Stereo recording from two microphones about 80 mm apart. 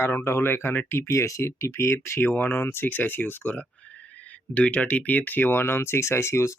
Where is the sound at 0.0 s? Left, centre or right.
Left.